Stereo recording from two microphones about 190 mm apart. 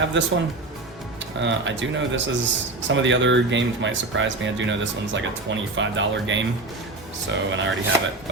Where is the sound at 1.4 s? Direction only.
75° right (ahead or behind).